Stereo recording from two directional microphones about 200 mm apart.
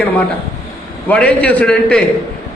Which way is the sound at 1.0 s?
5° left (ahead or behind).